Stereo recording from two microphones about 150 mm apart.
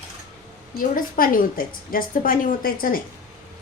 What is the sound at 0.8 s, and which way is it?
A woman's voice, 70° left (ahead or behind).